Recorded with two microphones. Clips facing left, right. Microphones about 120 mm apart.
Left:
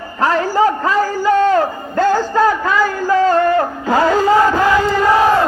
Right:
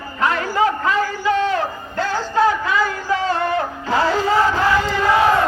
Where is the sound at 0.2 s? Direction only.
35° left (ahead or behind).